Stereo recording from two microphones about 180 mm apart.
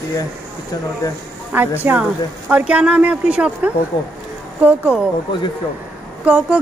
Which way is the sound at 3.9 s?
25° left (ahead or behind).